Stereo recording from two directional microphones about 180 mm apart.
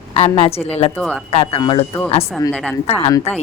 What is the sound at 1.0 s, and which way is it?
Speech, 5° left (ahead or behind).